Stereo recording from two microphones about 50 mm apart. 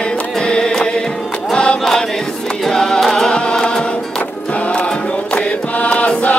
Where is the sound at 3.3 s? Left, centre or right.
Centre.